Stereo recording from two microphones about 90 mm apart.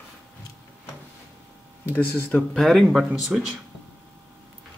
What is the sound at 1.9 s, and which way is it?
Speech, 25° left (ahead or behind).